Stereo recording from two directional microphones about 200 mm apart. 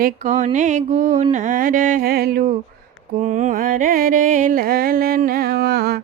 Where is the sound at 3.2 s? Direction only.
35° right (ahead or behind).